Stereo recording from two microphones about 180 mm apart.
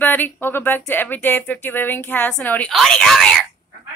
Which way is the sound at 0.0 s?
10° left (ahead or behind).